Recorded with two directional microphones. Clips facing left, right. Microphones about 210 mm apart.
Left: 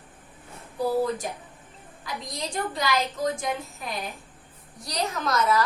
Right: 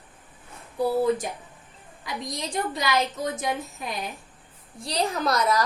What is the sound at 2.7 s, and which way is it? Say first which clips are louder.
Speech: right 1 dB; 20° right (ahead or behind).